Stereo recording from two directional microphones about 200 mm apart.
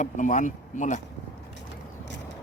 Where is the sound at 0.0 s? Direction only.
40° left (ahead or behind).